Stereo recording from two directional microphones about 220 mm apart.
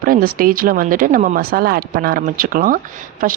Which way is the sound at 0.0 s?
40° right (ahead or behind).